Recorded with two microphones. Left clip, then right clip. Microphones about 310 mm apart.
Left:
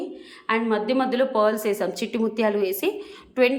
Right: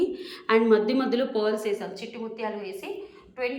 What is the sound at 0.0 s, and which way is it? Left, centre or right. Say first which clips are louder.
A woman's voice: right 4 dB; centre.